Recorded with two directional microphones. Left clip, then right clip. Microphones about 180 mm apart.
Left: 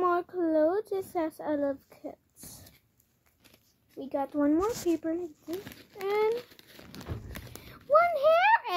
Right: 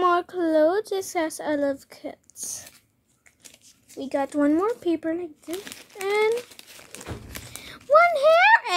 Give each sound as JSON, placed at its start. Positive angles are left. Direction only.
{"t": 0.0, "sound": "a woman's voice", "side_deg": -35}
{"t": 4.0, "sound": "speech", "side_deg": -40}
{"t": 6.3, "sound": "crumpling", "side_deg": 10}
{"t": 7.6, "sound": "a child's voice", "side_deg": -35}